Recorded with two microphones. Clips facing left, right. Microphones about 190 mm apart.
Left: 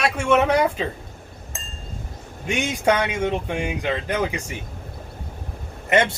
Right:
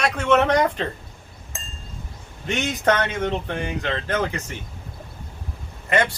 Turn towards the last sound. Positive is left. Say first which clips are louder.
# left 2 dB
turn(degrees=25)  # may be behind; listen again after turning